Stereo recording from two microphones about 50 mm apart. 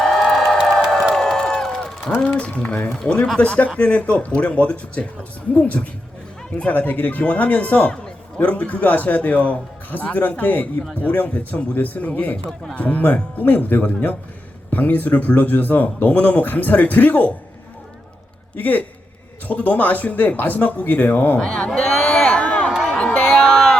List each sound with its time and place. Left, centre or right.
0.0 s crowd: centre
1.1 s a sound: centre
2.2 s speech: left
6.7 s a man's voice: left
18.5 s a man's voice: left
21.4 s a man's voice: centre
21.7 s a sound: centre